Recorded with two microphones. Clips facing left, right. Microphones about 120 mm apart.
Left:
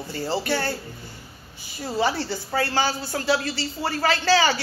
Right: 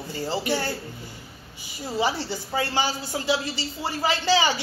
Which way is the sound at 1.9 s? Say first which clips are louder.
Left 2 dB; 15° right (ahead or behind).